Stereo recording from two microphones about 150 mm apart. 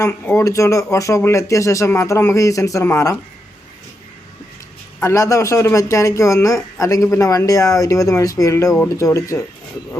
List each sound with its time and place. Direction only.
0.0 s speech: 15° left (ahead or behind)
4.9 s speech: 20° left (ahead or behind)